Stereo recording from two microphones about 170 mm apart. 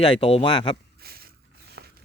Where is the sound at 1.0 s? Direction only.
65° right (ahead or behind).